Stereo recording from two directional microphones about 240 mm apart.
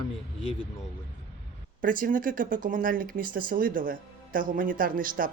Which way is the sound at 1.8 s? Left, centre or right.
Right.